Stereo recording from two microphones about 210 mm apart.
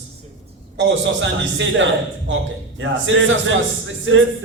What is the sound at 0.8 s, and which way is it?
A man's voice, 60° right (ahead or behind).